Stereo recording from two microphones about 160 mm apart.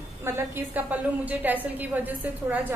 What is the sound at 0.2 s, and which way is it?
A woman's voice, 10° right (ahead or behind).